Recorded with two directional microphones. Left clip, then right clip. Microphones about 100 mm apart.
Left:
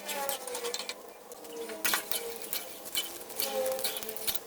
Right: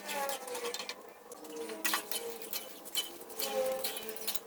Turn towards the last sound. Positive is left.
turn(degrees=5)  # may be behind; listen again after turning